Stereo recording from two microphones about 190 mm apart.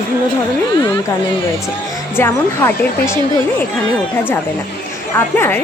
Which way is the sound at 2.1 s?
10° left (ahead or behind).